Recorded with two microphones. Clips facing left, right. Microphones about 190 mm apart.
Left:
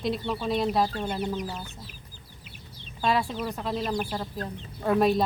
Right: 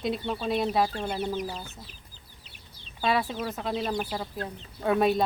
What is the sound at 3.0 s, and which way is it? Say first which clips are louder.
Speech: left 1 dB; 5° right (ahead or behind).